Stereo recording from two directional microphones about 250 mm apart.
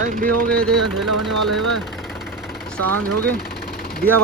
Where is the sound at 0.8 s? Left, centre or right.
Right.